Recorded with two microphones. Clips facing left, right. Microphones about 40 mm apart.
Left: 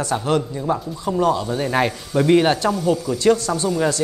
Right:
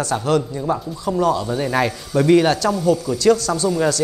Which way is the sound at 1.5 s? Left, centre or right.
Centre.